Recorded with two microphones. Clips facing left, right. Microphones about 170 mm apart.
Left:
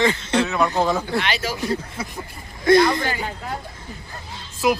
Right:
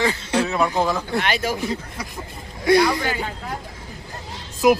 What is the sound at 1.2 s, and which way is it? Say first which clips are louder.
Speech: right 2 dB; 50° right (ahead or behind).